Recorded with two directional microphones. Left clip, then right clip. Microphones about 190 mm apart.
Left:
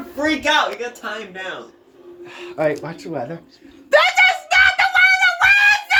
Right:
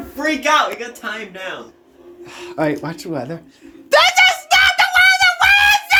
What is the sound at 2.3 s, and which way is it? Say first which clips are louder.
Speech: even; 25° right (ahead or behind).